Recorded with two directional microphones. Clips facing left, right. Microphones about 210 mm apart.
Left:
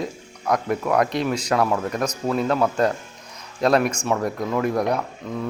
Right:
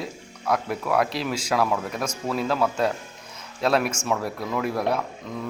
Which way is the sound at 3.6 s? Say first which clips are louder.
Left 4 dB; 5° right (ahead or behind).